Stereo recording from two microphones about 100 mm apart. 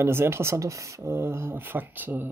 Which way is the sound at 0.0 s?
25° right (ahead or behind).